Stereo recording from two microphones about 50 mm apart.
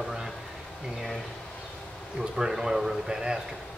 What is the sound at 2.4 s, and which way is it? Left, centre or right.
Speech, centre.